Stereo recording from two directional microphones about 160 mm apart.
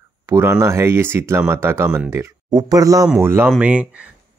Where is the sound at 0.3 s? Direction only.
15° right (ahead or behind).